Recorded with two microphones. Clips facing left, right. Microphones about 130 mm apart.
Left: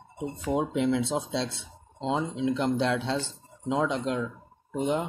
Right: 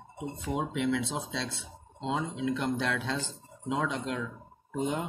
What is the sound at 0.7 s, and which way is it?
Speech, 30° left (ahead or behind).